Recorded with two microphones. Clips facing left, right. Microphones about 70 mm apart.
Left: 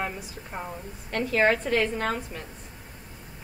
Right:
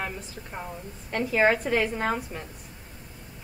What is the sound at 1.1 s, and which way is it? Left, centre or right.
A woman's voice, centre.